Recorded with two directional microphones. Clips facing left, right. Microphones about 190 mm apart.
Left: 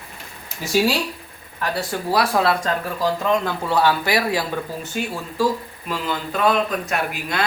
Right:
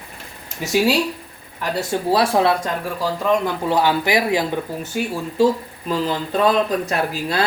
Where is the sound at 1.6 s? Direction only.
25° right (ahead or behind).